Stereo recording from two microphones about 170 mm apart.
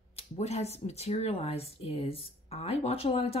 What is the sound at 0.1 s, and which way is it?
Speech, 40° left (ahead or behind).